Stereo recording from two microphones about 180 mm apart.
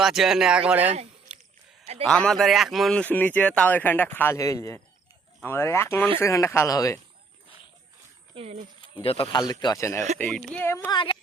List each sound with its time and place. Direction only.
0.0 s speech: centre (ahead or behind)
1.3 s a sound: 5° right (ahead or behind)
2.0 s speech: 5° left (ahead or behind)
8.4 s speech: 30° right (ahead or behind)
8.8 s speech: 30° left (ahead or behind)
10.2 s speech: 5° left (ahead or behind)